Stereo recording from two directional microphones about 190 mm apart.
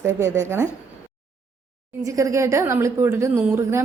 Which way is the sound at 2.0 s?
15° right (ahead or behind).